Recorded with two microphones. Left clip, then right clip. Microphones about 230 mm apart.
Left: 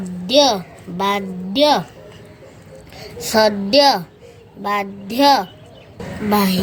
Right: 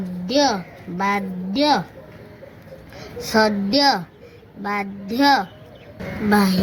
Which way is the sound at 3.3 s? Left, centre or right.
Left.